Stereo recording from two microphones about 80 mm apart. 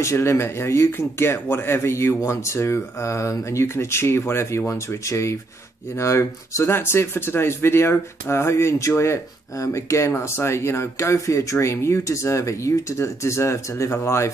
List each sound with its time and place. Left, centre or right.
0.0 s speech: left